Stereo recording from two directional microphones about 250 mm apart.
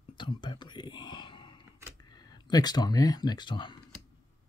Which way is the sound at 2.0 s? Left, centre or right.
Centre.